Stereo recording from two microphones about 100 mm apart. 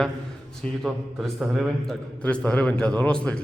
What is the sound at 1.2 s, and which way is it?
A man's voice, centre (ahead or behind).